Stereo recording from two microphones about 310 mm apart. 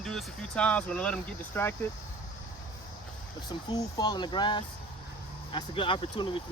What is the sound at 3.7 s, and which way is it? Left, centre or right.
Speech, centre.